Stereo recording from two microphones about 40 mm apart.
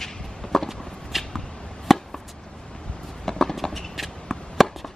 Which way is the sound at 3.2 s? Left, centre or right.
Centre.